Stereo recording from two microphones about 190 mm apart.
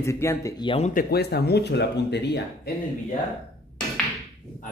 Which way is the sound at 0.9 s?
55° left (ahead or behind).